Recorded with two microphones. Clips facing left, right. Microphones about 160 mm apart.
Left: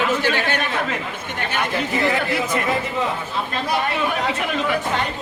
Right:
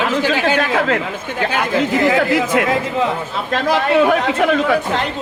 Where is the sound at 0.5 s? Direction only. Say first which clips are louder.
Right 7 dB; 90° right.